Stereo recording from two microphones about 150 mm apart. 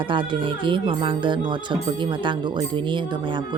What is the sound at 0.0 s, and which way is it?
Speech, 35° right (ahead or behind).